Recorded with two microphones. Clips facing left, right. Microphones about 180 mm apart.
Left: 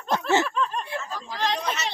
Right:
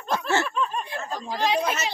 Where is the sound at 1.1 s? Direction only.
15° right (ahead or behind).